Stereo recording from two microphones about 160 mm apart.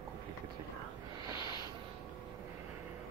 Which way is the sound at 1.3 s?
25° left (ahead or behind).